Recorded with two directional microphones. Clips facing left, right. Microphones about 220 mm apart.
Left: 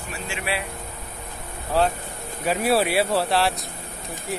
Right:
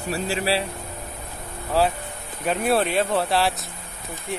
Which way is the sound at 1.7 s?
Centre (ahead or behind).